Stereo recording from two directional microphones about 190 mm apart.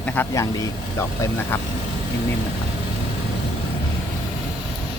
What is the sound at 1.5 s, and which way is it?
Speech, 10° left (ahead or behind).